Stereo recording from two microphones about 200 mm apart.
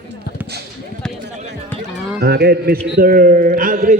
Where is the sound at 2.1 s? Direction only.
55° right (ahead or behind).